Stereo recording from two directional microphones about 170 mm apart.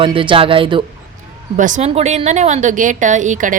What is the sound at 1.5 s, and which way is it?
A woman's voice, 50° right (ahead or behind).